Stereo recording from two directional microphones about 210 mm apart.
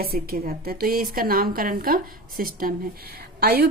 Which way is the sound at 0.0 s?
45° right (ahead or behind).